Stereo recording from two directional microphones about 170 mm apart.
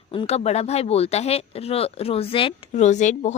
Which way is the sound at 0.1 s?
35° left (ahead or behind).